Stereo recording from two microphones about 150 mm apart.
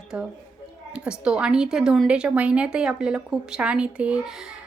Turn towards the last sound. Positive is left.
turn(degrees=-5)  # may be behind; listen again after turning